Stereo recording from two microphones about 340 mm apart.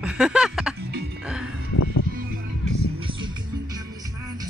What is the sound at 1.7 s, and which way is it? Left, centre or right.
Music, left.